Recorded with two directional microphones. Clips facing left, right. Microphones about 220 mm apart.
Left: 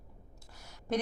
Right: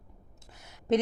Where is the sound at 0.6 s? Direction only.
20° right (ahead or behind).